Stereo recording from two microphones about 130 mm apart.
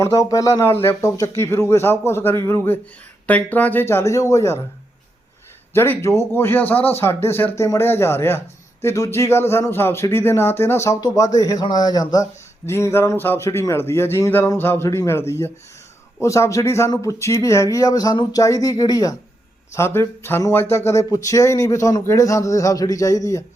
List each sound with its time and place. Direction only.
0.0 s speech: 25° left (ahead or behind)
5.7 s speech: 20° left (ahead or behind)